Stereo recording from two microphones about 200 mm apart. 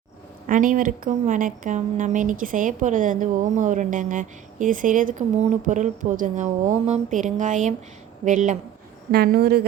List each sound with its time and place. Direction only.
0.4 s a woman's voice: 40° right (ahead or behind)
9.1 s speech: 50° right (ahead or behind)